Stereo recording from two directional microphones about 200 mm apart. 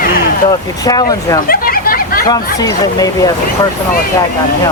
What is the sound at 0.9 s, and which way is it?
Speech, 20° left (ahead or behind).